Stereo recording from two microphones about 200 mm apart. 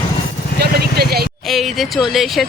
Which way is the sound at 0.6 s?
50° right (ahead or behind).